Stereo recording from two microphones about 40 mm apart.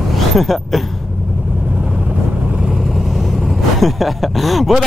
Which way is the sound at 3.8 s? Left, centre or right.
Centre.